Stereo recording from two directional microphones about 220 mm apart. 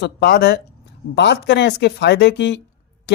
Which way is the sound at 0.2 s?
50° left (ahead or behind).